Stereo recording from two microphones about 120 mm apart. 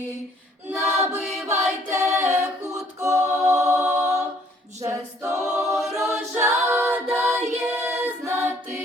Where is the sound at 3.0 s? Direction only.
25° right (ahead or behind).